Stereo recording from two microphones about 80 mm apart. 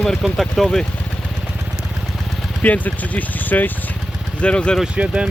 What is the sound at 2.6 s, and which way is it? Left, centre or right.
Speech, centre.